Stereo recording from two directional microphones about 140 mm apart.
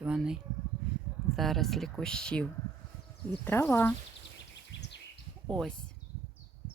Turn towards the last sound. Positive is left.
turn(degrees=5)  # may be behind; listen again after turning